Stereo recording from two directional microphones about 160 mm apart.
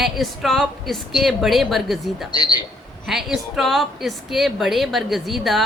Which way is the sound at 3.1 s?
Centre (ahead or behind).